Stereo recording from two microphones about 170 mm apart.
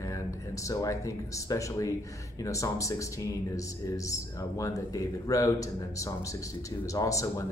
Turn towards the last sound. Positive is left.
turn(degrees=20)  # may be behind; listen again after turning